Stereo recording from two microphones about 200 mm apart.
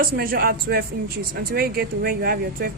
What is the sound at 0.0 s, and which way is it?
Speech, 45° right (ahead or behind).